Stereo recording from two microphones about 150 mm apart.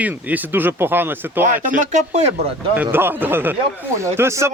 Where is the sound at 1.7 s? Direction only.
50° right (ahead or behind).